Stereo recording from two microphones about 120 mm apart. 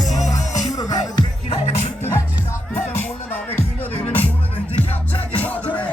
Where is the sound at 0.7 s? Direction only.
30° left (ahead or behind).